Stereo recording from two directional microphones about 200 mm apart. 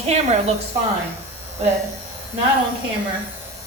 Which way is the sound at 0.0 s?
35° right (ahead or behind).